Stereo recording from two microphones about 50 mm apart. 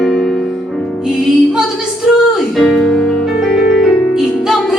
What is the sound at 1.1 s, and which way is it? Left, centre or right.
Music, centre.